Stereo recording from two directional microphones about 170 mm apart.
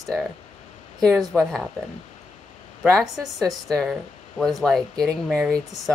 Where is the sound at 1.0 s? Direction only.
Centre (ahead or behind).